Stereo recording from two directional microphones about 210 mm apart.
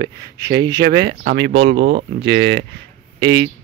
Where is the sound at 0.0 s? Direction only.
55° right (ahead or behind).